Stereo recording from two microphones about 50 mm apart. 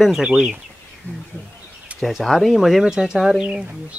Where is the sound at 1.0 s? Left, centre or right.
Left.